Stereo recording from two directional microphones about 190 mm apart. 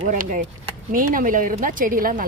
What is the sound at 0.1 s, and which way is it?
Speech, 45° right (ahead or behind).